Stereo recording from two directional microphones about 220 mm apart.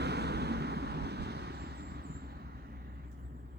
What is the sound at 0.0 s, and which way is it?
Vehicle, 50° right (ahead or behind).